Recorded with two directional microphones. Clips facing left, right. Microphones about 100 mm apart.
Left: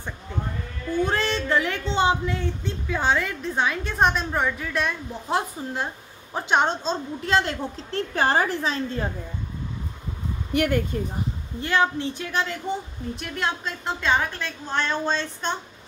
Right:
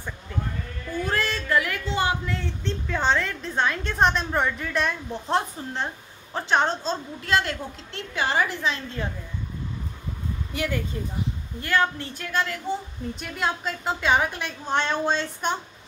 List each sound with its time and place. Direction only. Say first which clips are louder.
1.0 s speech: left 1 dB; 25° left (ahead or behind); by 5.9 s 5° left (ahead or behind)
6.3 s a woman's voice: left 1 dB; 15° left (ahead or behind)
7.9 s a woman's voice: left 4 dB; 40° left (ahead or behind)
10.5 s speech: left 7 dB; 60° left (ahead or behind)
11.6 s a woman's voice: left 2 dB; 20° left (ahead or behind)
13.1 s a woman's voice: even; centre (ahead or behind)